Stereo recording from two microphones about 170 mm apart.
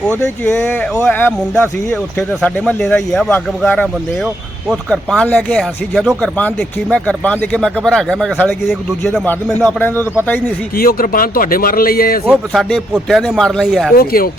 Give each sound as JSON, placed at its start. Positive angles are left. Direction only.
{"t": 0.1, "sound": "speech", "side_deg": 10}
{"t": 10.8, "sound": "speech", "side_deg": 60}
{"t": 12.2, "sound": "speech", "side_deg": 0}
{"t": 13.9, "sound": "speech", "side_deg": 60}